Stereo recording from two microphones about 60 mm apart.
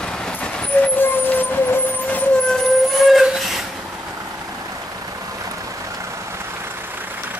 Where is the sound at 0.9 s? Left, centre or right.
Left.